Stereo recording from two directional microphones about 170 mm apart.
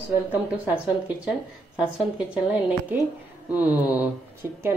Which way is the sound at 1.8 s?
5° right (ahead or behind).